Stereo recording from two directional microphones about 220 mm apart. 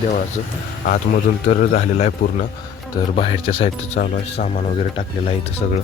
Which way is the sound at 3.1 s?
25° left (ahead or behind).